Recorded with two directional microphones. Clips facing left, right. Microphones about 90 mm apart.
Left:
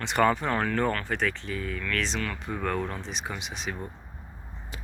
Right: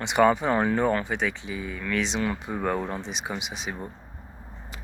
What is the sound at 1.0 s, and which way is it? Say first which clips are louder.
Speech: right 1 dB; 5° right (ahead or behind).